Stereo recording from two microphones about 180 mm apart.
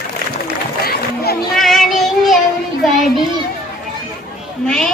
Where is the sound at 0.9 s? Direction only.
60° left (ahead or behind).